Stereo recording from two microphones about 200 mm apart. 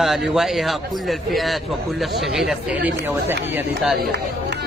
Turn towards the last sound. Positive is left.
turn(degrees=-5)  # may be behind; listen again after turning